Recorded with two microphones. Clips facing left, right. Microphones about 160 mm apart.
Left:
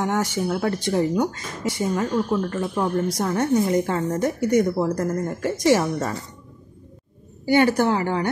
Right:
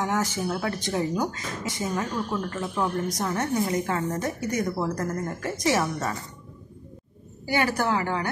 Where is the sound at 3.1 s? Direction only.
30° left (ahead or behind).